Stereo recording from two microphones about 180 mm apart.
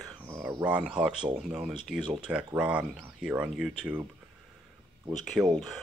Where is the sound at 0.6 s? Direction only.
10° right (ahead or behind).